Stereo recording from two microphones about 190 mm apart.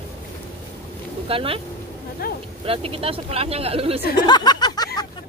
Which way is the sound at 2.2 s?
50° left (ahead or behind).